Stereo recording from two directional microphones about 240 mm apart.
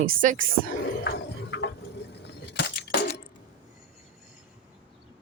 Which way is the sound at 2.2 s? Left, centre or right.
Left.